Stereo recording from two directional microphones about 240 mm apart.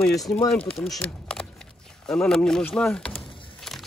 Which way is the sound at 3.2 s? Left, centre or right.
Left.